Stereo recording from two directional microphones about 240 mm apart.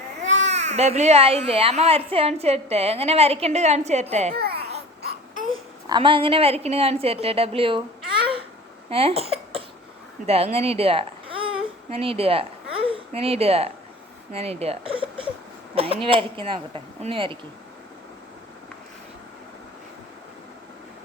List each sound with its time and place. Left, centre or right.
0.2 s speech: right
4.4 s speech: right
5.5 s speech: right
8.2 s babbling: right
8.9 s cough: right
10.2 s speech: right